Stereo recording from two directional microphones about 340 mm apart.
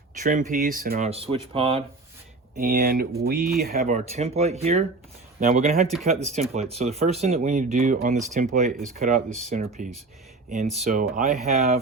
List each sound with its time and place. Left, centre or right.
0.2 s speech: right
5.9 s speech: centre
6.2 s speech: centre